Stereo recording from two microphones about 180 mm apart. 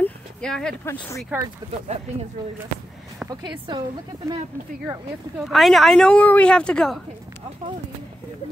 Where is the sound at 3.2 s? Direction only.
25° right (ahead or behind).